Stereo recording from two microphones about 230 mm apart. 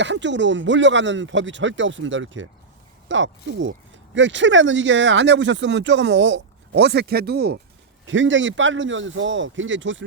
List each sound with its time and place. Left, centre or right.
0.0 s speech: right
8.0 s a man's voice: right